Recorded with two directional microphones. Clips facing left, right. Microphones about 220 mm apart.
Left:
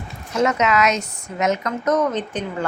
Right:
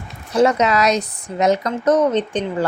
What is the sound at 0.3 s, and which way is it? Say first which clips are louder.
Speech: right 3 dB; 35° right (ahead or behind).